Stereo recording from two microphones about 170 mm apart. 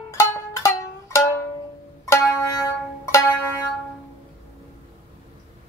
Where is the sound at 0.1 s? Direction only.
15° left (ahead or behind).